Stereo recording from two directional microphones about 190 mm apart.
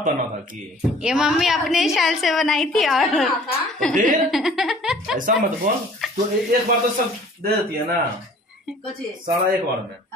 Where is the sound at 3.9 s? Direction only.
45° right (ahead or behind).